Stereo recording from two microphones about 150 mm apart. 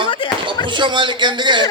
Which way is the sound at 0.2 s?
30° left (ahead or behind).